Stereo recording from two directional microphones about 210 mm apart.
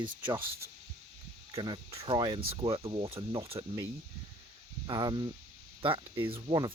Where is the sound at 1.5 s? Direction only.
20° right (ahead or behind).